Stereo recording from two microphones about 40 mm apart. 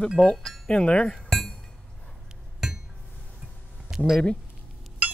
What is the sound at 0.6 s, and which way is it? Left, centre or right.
Speech, left.